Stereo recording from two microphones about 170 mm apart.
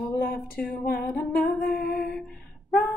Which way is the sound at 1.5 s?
65° left (ahead or behind).